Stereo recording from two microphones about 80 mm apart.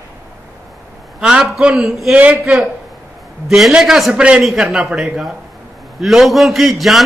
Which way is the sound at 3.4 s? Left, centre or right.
Centre.